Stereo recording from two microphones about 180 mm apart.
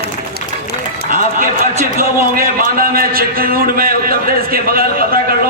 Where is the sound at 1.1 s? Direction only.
50° right (ahead or behind).